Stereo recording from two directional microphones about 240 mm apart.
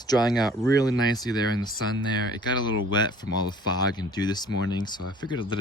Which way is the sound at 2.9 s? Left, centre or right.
Centre.